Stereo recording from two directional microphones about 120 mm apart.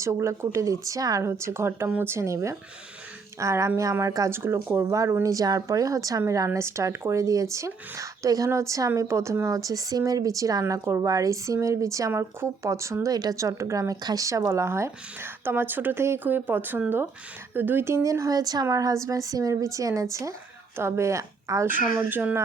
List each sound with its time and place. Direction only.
0.0 s a woman's voice: 25° right (ahead or behind)